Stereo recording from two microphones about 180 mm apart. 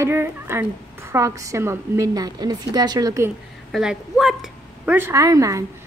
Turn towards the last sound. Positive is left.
turn(degrees=-20)  # may be behind; listen again after turning